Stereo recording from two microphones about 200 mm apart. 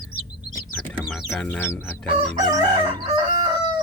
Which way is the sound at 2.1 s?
20° right (ahead or behind).